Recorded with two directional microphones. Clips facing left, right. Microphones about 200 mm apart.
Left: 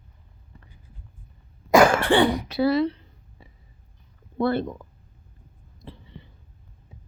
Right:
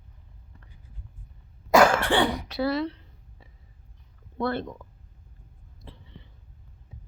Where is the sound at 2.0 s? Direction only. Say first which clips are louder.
Left 4 dB; 5° left (ahead or behind).